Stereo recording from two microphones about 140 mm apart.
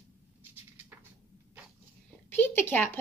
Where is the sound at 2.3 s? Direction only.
15° left (ahead or behind).